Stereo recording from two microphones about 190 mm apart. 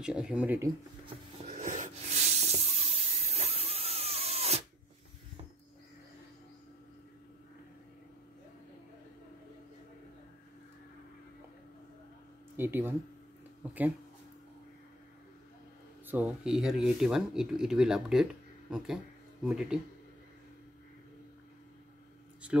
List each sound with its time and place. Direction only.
0.0 s speech: 5° right (ahead or behind)
1.4 s a sound: 40° right (ahead or behind)
12.5 s speech: 10° right (ahead or behind)
16.1 s speech: 5° right (ahead or behind)